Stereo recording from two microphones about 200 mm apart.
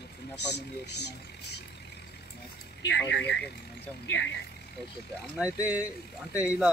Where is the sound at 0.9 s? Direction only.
55° left (ahead or behind).